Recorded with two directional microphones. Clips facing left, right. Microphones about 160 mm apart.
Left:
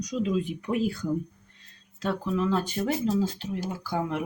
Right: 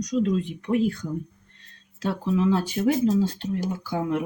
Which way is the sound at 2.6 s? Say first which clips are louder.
Right 5 dB; centre (ahead or behind).